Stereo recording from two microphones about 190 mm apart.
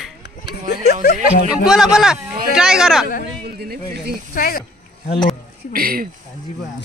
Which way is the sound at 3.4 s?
55° right (ahead or behind).